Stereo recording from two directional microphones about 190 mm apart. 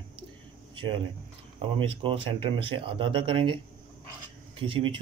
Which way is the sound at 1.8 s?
25° right (ahead or behind).